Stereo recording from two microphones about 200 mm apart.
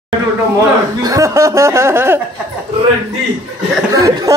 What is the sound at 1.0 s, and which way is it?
Speech, 15° right (ahead or behind).